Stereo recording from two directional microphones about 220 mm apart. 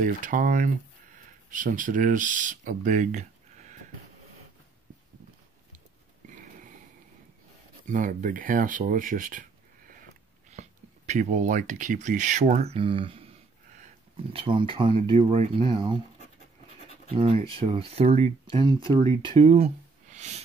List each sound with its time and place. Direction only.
0.0 s speech: 40° right (ahead or behind)
6.2 s wheeze: 35° right (ahead or behind)
7.8 s speech: 35° right (ahead or behind)
14.3 s speech: 25° right (ahead or behind)
17.1 s speech: 25° right (ahead or behind)